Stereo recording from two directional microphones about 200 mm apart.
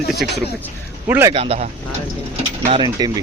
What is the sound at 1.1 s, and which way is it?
Speech, 10° right (ahead or behind).